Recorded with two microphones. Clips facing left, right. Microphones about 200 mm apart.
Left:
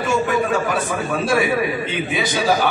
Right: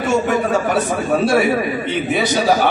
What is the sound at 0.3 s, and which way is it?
Speech, 40° right (ahead or behind).